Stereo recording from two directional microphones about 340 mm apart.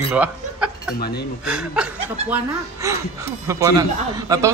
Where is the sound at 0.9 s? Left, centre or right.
Left.